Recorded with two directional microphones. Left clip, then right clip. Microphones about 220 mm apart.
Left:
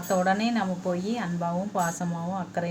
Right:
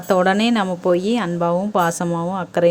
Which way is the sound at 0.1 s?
45° right (ahead or behind).